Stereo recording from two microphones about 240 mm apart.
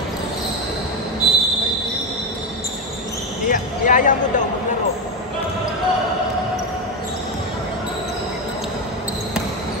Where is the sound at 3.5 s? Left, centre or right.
Left.